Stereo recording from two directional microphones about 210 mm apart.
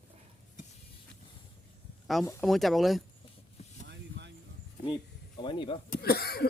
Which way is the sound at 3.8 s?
55° right (ahead or behind).